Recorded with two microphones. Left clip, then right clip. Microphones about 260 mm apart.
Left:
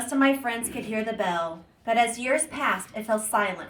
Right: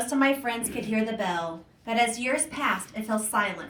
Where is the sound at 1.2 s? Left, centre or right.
Centre.